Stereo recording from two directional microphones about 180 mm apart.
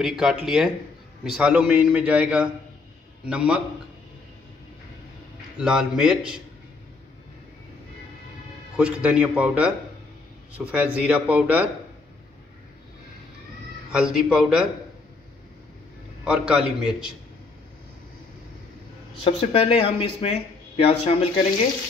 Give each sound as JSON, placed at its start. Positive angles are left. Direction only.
{"t": 0.0, "sound": "a man's voice", "side_deg": 0}
{"t": 5.6, "sound": "a man's voice", "side_deg": -5}
{"t": 8.7, "sound": "a man's voice", "side_deg": -5}
{"t": 13.9, "sound": "a man's voice", "side_deg": -5}
{"t": 16.3, "sound": "a man's voice", "side_deg": -5}
{"t": 19.2, "sound": "speech", "side_deg": 30}